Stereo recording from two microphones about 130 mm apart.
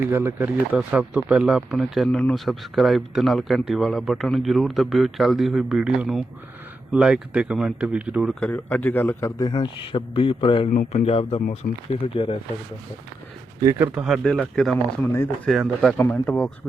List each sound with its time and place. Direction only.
0.1 s speech: 15° right (ahead or behind)
2.0 s speech: 10° left (ahead or behind); by 8.4 s 10° right (ahead or behind)
8.4 s a man's voice: 10° left (ahead or behind)
9.4 s a man's voice: 35° left (ahead or behind)
10.7 s speech: 90° left
11.0 s speech: 50° left (ahead or behind)
13.7 s speech: 15° right (ahead or behind)
14.0 s speech: centre (ahead or behind)
15.0 s speech: 20° left (ahead or behind)
15.4 s speech: centre (ahead or behind)
16.0 s a man's voice: 15° left (ahead or behind)